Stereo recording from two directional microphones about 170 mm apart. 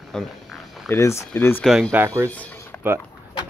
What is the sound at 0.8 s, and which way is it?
Speech, 15° left (ahead or behind).